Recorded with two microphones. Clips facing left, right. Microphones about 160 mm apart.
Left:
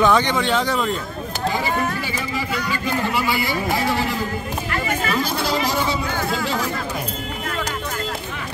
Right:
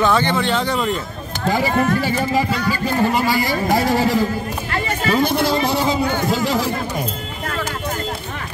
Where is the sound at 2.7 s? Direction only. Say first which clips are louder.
Right 4 dB; 40° right (ahead or behind).